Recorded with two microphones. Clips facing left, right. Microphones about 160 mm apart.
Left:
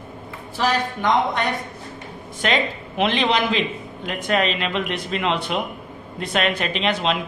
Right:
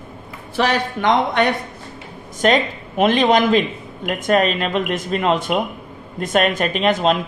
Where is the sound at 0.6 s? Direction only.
75° right (ahead or behind).